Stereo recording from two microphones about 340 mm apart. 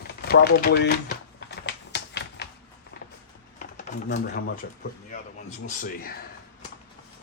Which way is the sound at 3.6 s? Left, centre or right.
Left.